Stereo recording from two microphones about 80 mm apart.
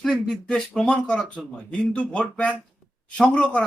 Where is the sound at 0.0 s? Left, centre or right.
Centre.